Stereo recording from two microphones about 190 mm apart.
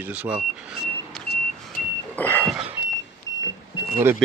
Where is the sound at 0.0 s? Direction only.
5° right (ahead or behind); by 2.5 s 10° left (ahead or behind).